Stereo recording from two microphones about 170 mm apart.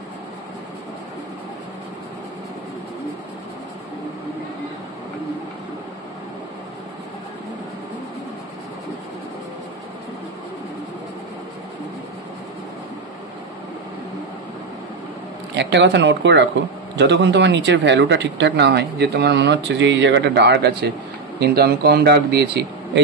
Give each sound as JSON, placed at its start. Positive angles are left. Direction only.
{"t": 15.5, "sound": "speech", "side_deg": -90}
{"t": 21.4, "sound": "speech", "side_deg": -70}